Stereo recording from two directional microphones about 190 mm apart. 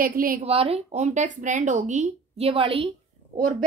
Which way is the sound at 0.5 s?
30° right (ahead or behind).